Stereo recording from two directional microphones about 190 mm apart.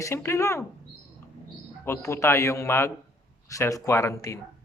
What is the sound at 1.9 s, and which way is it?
Speech, 15° left (ahead or behind).